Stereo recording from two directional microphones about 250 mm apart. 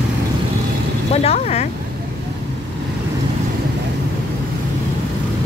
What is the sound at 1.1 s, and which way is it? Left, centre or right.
Speech, left.